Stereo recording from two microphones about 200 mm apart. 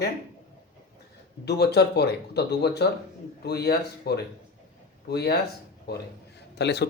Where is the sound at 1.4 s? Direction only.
55° left (ahead or behind).